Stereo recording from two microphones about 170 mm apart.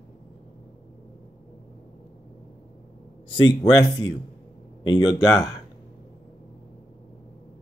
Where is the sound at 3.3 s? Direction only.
30° left (ahead or behind).